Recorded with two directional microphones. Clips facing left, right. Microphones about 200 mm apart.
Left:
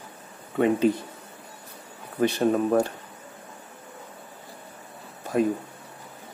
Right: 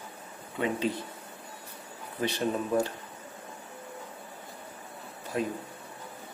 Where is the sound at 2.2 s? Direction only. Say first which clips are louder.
Left 8 dB; 60° left (ahead or behind).